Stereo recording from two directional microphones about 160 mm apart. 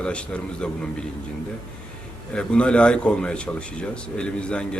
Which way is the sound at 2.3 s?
5° left (ahead or behind).